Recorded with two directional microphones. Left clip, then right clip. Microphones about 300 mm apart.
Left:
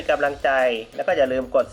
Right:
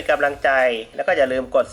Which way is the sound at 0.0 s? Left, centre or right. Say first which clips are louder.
Right 2 dB; centre.